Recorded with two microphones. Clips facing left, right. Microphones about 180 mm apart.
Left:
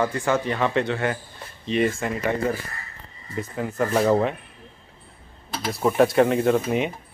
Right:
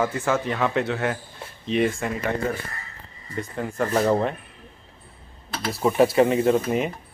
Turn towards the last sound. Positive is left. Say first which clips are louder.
# even
turn(degrees=0)  # may be behind; listen again after turning